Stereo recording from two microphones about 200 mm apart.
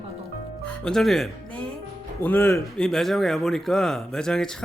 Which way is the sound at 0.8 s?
Centre (ahead or behind).